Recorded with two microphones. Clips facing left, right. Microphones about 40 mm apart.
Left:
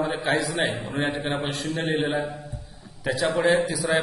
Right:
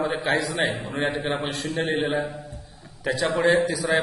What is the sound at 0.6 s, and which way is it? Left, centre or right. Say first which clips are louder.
Speech: right 1 dB; right.